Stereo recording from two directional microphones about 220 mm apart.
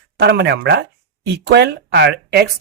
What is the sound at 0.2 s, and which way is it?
Speech, 50° right (ahead or behind).